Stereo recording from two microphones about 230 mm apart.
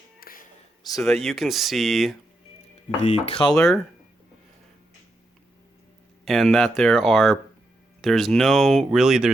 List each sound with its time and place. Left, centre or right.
0.2 s whispering: left
0.9 s speech: centre
3.0 s speech: left
3.5 s speech: centre
6.2 s speech: centre